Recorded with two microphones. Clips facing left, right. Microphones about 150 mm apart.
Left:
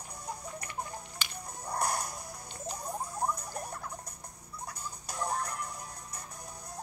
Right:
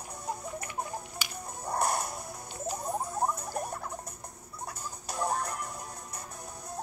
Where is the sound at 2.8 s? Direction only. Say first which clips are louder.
Right 4 dB; 25° right (ahead or behind).